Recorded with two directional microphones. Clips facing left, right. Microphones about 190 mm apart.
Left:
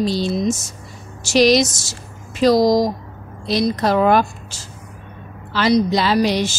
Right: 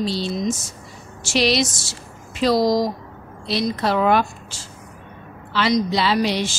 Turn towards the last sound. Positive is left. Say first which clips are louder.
# left 3 dB
turn(degrees=45)  # may be behind; listen again after turning